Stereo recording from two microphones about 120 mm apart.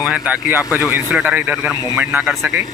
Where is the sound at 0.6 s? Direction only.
25° left (ahead or behind).